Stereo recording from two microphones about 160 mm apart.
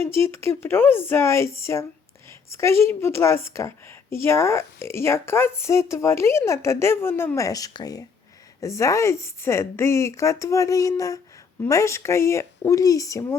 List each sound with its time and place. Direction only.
0.0 s a woman's voice: 15° left (ahead or behind)